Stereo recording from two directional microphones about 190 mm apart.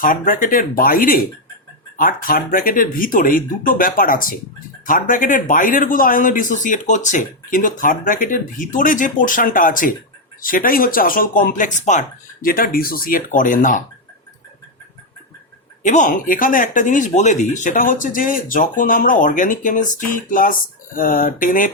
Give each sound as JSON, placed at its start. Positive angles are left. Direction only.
{"t": 0.0, "sound": "speech", "side_deg": 45}
{"t": 15.8, "sound": "speech", "side_deg": 40}